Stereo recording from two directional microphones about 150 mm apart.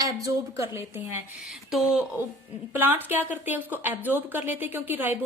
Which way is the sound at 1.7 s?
Centre (ahead or behind).